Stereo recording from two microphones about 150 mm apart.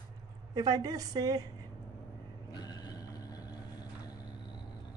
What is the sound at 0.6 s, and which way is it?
Speech, 25° right (ahead or behind).